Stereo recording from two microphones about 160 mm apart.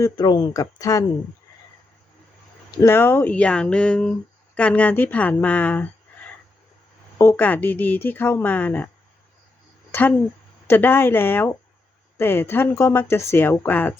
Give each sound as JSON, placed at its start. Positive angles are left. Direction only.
{"t": 0.0, "sound": "speech", "side_deg": 25}
{"t": 2.7, "sound": "a woman's voice", "side_deg": 15}
{"t": 7.2, "sound": "a woman's voice", "side_deg": 15}
{"t": 9.9, "sound": "a woman's voice", "side_deg": 10}